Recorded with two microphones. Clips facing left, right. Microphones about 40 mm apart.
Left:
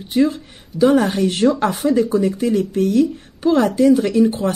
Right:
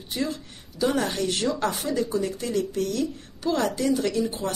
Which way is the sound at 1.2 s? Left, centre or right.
Left.